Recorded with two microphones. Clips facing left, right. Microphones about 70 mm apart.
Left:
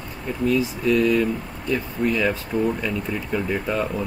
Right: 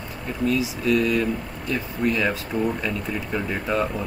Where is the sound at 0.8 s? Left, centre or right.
Centre.